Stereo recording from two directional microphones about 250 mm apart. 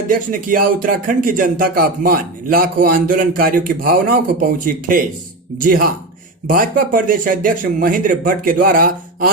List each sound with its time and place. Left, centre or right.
0.1 s speech: right